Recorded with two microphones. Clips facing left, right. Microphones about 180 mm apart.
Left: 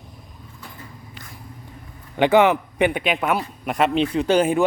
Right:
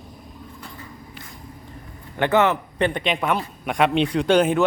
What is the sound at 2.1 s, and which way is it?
A man's voice, 15° left (ahead or behind).